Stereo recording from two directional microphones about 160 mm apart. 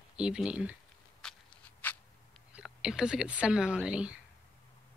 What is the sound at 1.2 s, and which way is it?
Walk, 5° left (ahead or behind).